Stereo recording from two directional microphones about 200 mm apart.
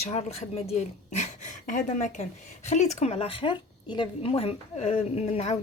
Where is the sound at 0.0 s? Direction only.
30° left (ahead or behind).